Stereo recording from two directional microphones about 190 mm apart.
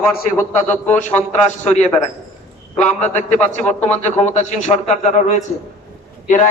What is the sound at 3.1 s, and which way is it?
A man's voice, 35° left (ahead or behind).